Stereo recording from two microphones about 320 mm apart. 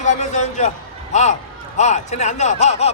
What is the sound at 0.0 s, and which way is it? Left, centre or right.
A man's voice, left.